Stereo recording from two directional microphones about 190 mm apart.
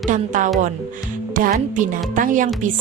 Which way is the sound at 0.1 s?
40° right (ahead or behind).